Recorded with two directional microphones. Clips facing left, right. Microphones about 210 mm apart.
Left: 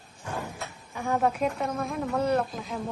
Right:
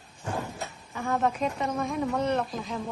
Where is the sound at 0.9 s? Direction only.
10° left (ahead or behind).